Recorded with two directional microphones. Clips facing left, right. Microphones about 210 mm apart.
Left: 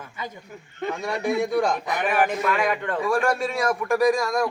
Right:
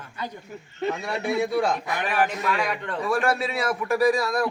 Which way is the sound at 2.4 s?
50° left (ahead or behind).